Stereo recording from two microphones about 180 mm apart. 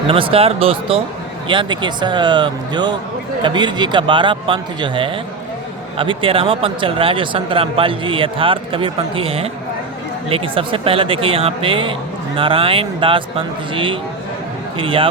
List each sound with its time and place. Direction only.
0.1 s speech: 30° right (ahead or behind)